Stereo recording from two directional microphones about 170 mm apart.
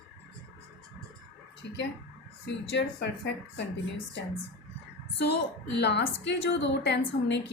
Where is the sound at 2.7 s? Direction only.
90° left.